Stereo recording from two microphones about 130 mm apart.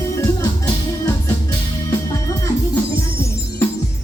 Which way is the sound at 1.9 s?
20° left (ahead or behind).